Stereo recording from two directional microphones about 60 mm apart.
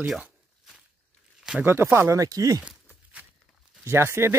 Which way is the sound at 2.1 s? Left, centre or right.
Right.